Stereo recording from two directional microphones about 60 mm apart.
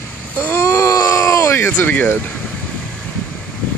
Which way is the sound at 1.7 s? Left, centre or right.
Left.